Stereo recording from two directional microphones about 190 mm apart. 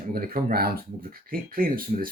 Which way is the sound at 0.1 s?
50° right (ahead or behind).